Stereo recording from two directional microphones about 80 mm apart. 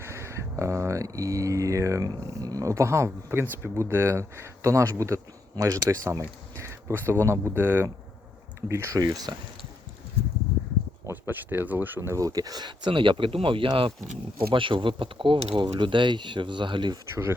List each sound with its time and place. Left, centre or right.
0.0 s speech: right
9.0 s speech: right
11.1 s speech: right
11.9 s speech: right